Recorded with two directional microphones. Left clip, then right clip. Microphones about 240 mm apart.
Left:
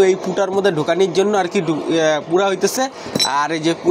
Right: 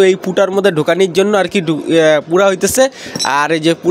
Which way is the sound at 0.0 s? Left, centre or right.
Right.